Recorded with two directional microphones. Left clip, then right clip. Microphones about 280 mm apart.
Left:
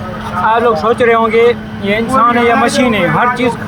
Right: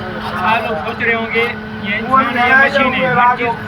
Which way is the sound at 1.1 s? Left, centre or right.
Centre.